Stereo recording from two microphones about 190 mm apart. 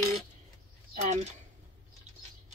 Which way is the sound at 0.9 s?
35° right (ahead or behind).